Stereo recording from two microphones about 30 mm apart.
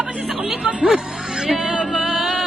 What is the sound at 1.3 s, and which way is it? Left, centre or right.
Music, centre.